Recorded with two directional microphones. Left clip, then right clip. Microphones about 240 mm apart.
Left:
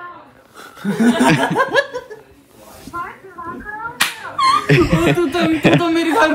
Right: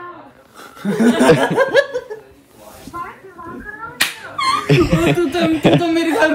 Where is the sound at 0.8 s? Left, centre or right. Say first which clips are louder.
Right 2 dB; centre.